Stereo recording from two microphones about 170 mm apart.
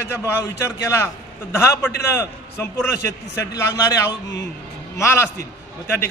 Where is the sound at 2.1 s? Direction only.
15° left (ahead or behind).